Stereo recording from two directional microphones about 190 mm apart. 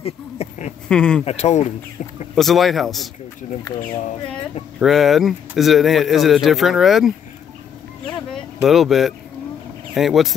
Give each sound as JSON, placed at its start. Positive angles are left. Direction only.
{"t": 0.0, "sound": "a sound", "side_deg": 35}
{"t": 0.8, "sound": "speech", "side_deg": 5}
{"t": 1.2, "sound": "speech", "side_deg": 35}
{"t": 2.3, "sound": "speech", "side_deg": 0}
{"t": 4.7, "sound": "speech", "side_deg": 0}
{"t": 8.6, "sound": "speech", "side_deg": 0}